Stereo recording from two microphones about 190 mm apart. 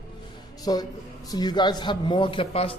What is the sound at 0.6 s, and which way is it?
A man's voice, 20° left (ahead or behind).